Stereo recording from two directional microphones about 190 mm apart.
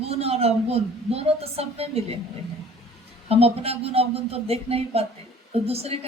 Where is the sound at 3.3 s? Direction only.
30° right (ahead or behind).